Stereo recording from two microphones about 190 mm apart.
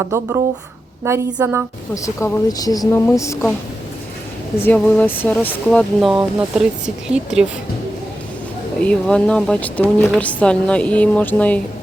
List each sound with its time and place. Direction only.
0.0 s a woman's voice: 15° right (ahead or behind)
2.0 s speech: 15° left (ahead or behind)
4.6 s speech: 10° left (ahead or behind)
6.0 s speech: 5° right (ahead or behind)
8.8 s speech: 5° left (ahead or behind)